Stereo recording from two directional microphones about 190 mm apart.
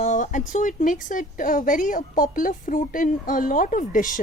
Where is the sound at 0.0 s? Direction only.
40° left (ahead or behind).